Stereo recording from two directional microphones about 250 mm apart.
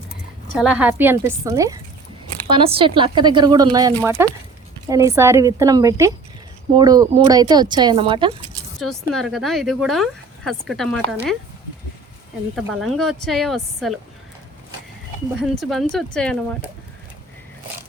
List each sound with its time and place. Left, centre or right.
0.5 s speech: centre
8.5 s speech: centre
12.5 s speech: centre
15.4 s speech: centre